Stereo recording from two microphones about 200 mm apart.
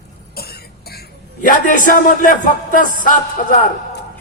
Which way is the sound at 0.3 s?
50° left (ahead or behind).